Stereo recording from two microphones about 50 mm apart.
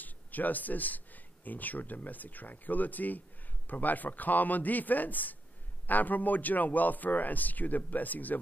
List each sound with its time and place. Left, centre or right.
0.0 s a man's voice: left